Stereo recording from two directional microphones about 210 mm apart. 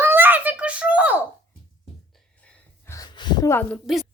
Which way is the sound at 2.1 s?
5° left (ahead or behind).